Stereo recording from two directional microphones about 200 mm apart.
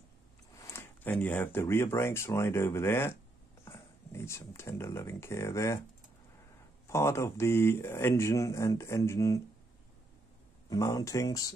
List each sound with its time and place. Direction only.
0.7 s speech: 10° left (ahead or behind)
6.9 s speech: 15° left (ahead or behind)
10.7 s speech: 20° left (ahead or behind)